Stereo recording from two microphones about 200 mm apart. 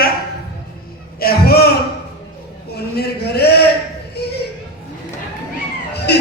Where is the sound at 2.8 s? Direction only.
50° left (ahead or behind).